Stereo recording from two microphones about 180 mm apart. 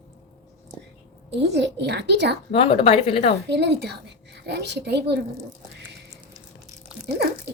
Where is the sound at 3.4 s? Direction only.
70° right (ahead or behind).